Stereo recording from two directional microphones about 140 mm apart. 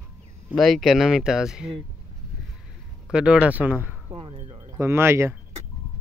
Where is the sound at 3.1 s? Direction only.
10° right (ahead or behind).